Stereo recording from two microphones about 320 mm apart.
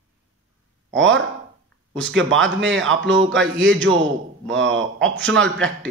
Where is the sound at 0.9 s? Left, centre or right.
Right.